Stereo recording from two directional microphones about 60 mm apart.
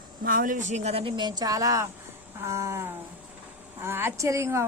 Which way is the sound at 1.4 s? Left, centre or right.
Right.